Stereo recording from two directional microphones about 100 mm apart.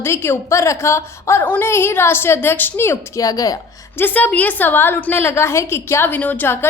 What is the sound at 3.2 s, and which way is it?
Speech, 35° left (ahead or behind).